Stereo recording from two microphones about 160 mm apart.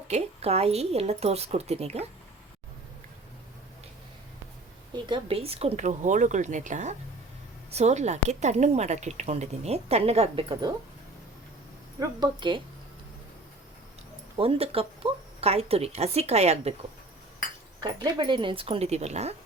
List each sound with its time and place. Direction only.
0.1 s speech: 40° right (ahead or behind)
5.0 s a woman's voice: 35° right (ahead or behind)
11.9 s speech: 30° right (ahead or behind)
14.3 s speech: 35° right (ahead or behind)
17.8 s speech: 25° right (ahead or behind); by 19.4 s 45° right (ahead or behind)